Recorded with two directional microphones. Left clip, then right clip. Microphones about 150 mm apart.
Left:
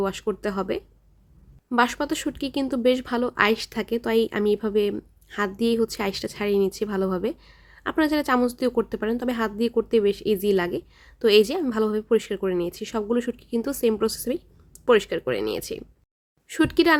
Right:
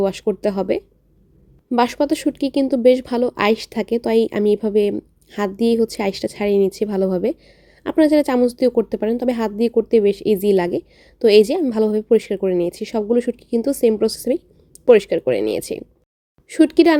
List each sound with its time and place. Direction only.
0.0 s a woman's voice: 20° right (ahead or behind)